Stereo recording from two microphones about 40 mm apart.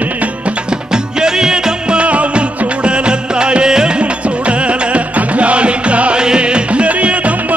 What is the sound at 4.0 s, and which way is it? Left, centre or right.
Music, right.